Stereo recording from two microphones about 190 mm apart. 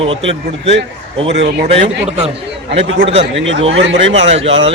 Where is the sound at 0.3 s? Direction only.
35° right (ahead or behind).